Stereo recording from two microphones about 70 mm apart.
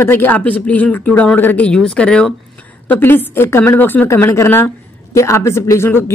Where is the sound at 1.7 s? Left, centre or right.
Centre.